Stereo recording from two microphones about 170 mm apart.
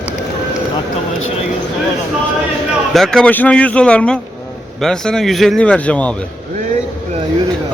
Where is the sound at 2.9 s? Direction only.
Centre (ahead or behind).